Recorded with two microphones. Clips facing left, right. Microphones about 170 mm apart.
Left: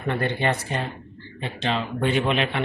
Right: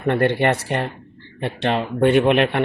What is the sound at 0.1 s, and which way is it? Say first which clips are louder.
Speech: right 6 dB; 65° right (ahead or behind).